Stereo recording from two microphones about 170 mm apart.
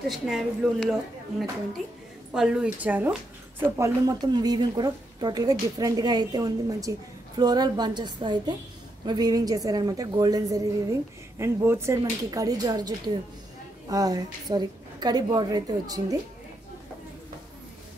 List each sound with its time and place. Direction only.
0.1 s speech: centre (ahead or behind)
2.3 s a woman's voice: 5° right (ahead or behind); by 16.2 s 20° right (ahead or behind)